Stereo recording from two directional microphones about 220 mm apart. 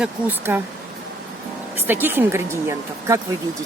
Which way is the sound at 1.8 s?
10° right (ahead or behind).